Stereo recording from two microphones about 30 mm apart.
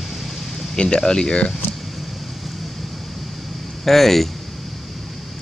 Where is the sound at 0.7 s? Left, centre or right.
Left.